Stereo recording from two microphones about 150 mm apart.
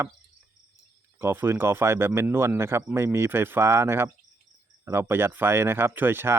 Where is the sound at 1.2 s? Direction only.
15° right (ahead or behind).